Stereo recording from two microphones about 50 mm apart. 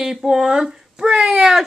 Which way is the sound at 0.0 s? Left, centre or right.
Centre.